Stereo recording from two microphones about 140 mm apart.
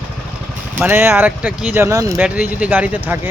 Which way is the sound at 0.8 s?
15° right (ahead or behind).